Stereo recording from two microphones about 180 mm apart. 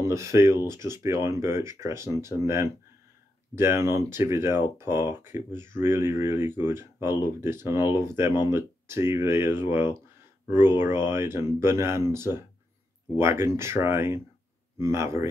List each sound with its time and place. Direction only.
0.0 s speech: 15° right (ahead or behind)